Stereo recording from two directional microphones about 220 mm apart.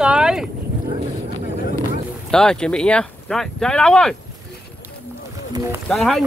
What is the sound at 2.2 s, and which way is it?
Speech, 5° left (ahead or behind).